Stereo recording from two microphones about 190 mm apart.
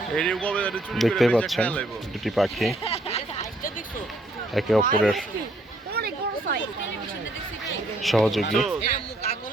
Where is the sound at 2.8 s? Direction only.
35° left (ahead or behind).